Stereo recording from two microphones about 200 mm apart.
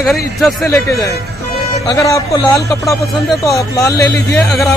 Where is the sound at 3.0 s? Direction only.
Centre (ahead or behind).